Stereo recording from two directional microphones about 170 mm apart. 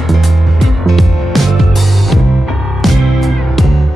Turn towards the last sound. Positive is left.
turn(degrees=0)  # may be behind; listen again after turning